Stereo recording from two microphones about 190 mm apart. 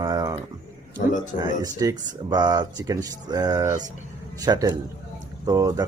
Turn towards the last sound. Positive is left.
turn(degrees=-20)  # may be behind; listen again after turning